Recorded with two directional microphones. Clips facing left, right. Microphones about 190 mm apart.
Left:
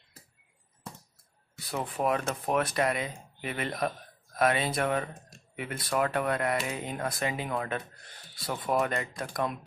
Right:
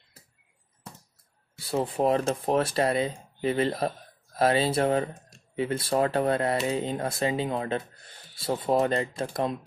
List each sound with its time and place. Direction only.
1.6 s speech: 30° right (ahead or behind)